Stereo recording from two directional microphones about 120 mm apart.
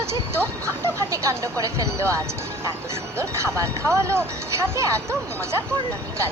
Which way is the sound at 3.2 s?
25° right (ahead or behind).